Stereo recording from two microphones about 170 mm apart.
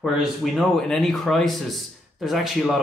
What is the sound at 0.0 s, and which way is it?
Speech, centre (ahead or behind).